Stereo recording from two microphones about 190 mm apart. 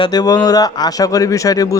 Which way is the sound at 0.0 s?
20° left (ahead or behind).